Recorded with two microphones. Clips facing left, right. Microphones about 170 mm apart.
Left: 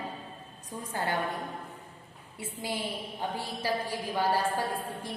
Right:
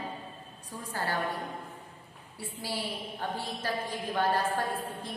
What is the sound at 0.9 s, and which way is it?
Speech, 20° left (ahead or behind).